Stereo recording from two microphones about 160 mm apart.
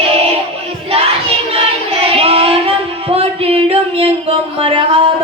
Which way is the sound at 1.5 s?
35° right (ahead or behind).